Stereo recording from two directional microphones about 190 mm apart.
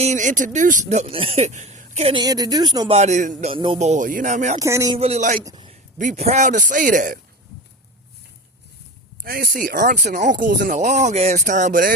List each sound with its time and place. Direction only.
0.0 s speech: 40° right (ahead or behind)
2.2 s speech: 20° right (ahead or behind)
2.9 s speech: 35° right (ahead or behind)
3.5 s speech: 25° right (ahead or behind)
4.6 s speech: 15° right (ahead or behind)
4.9 s a man's voice: 35° right (ahead or behind)
9.2 s speech: 50° right (ahead or behind)
10.8 s speech: 40° right (ahead or behind)